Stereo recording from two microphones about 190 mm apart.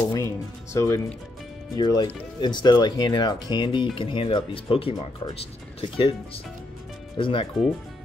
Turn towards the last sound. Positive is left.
turn(degrees=25)  # may be behind; listen again after turning